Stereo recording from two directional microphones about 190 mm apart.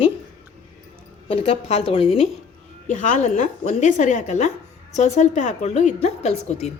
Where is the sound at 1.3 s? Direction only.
30° left (ahead or behind).